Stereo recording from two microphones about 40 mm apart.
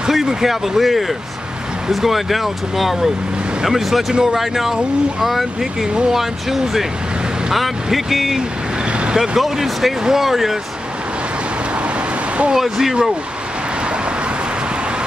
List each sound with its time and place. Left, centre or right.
0.1 s speech: centre
8.4 s vehicle: right
9.4 s speech: centre
12.5 s speech: centre